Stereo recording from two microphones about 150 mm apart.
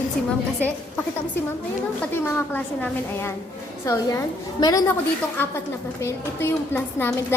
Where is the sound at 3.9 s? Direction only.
20° left (ahead or behind).